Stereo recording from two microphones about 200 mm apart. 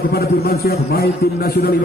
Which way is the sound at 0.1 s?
50° left (ahead or behind).